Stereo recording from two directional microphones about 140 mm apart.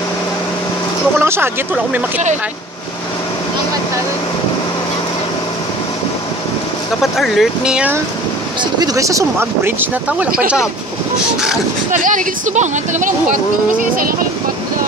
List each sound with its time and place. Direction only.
1.2 s speech: 15° right (ahead or behind)
7.0 s speech: centre (ahead or behind)
8.7 s speech: 25° right (ahead or behind); by 10.3 s 10° right (ahead or behind)
11.9 s speech: 65° right (ahead or behind)